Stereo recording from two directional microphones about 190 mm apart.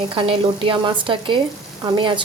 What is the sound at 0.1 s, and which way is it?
A woman's voice, 25° right (ahead or behind).